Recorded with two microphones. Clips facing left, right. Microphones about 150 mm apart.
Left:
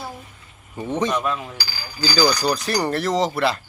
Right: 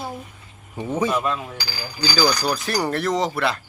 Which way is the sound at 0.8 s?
5° right (ahead or behind).